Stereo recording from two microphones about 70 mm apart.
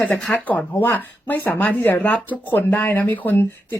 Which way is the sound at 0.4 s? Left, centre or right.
Left.